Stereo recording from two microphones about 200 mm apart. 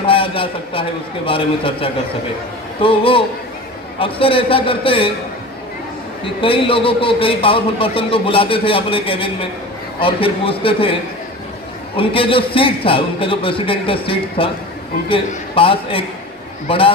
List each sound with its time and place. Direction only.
0.0 s a man's voice: 25° left (ahead or behind)
6.2 s a man's voice: 25° left (ahead or behind)
11.9 s a man's voice: 25° left (ahead or behind)